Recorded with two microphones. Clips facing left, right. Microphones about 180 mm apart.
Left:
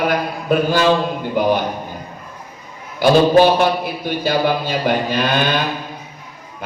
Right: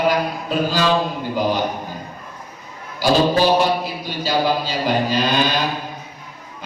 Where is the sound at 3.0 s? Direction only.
55° left (ahead or behind).